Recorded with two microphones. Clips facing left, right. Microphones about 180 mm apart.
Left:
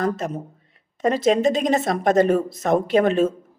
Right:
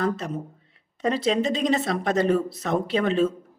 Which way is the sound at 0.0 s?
45° left (ahead or behind).